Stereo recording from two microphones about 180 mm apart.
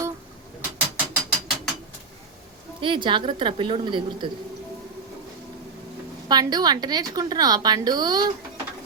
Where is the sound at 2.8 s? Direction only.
30° right (ahead or behind).